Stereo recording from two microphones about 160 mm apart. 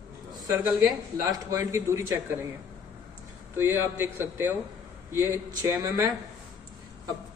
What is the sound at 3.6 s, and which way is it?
A man's voice, 15° right (ahead or behind).